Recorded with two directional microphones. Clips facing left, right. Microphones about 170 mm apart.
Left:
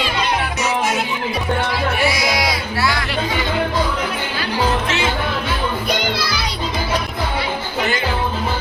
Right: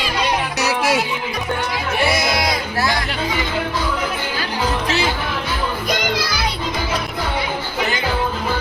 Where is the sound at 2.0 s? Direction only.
60° right (ahead or behind).